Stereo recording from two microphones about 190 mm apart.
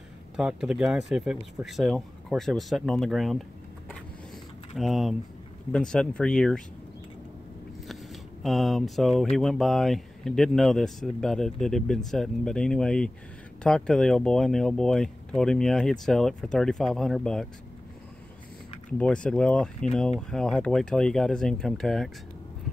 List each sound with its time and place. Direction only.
0.4 s speech: 5° right (ahead or behind)
4.7 s speech: centre (ahead or behind)
7.9 s speech: centre (ahead or behind)
18.9 s speech: 5° left (ahead or behind)